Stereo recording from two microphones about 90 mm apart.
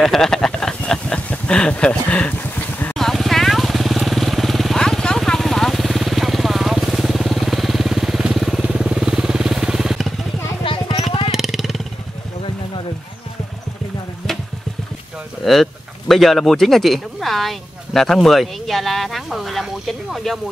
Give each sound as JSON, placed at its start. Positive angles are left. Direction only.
{"t": 0.0, "sound": "speech", "side_deg": 5}
{"t": 3.0, "sound": "vehicle", "side_deg": 0}
{"t": 10.6, "sound": "a sound", "side_deg": 70}
{"t": 11.3, "sound": "vehicle", "side_deg": -5}
{"t": 15.4, "sound": "speech", "side_deg": 5}